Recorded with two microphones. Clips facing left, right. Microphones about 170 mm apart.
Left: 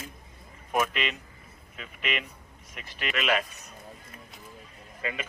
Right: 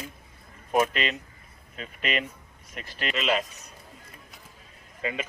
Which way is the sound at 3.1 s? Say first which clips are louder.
Right 1 dB; 25° right (ahead or behind).